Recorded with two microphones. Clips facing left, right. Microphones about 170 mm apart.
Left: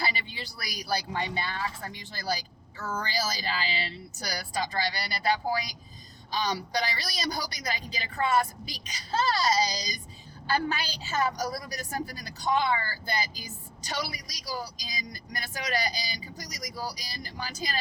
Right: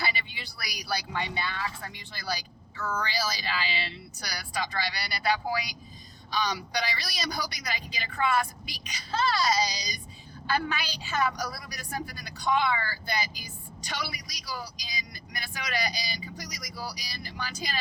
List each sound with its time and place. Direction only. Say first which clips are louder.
0.0 s speech: left 1 dB; 35° left (ahead or behind)